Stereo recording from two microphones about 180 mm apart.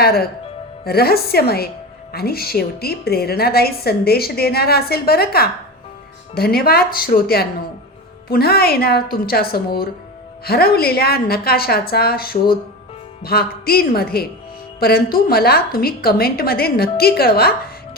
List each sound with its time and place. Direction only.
0.0 s speech: 60° left (ahead or behind)